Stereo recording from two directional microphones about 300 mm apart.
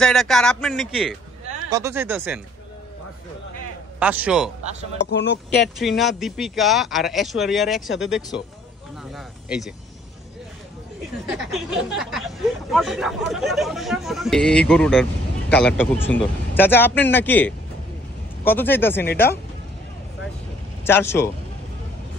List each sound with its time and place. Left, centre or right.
0.0 s speech: centre
4.0 s speech: centre
5.1 s speech: left
5.8 s speech: centre
11.2 s a man's voice: centre
20.8 s a man's voice: centre